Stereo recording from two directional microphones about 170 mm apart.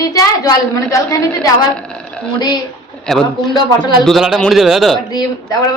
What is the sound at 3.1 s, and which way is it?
Speech, 5° left (ahead or behind).